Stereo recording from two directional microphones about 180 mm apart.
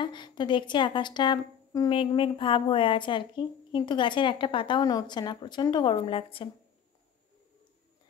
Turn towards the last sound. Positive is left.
turn(degrees=30)  # may be behind; listen again after turning